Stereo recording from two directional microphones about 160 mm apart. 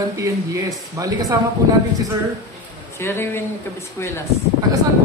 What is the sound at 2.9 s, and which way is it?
Speech, 15° left (ahead or behind).